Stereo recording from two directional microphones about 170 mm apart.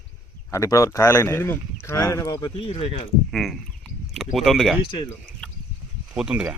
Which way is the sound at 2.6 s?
35° left (ahead or behind).